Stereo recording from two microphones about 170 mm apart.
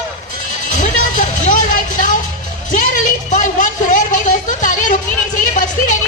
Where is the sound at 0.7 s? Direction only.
50° left (ahead or behind).